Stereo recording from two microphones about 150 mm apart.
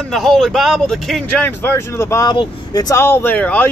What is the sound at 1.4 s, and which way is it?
A man's voice, 15° left (ahead or behind).